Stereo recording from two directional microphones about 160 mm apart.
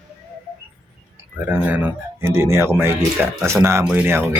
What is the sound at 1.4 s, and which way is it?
Speech, 10° right (ahead or behind).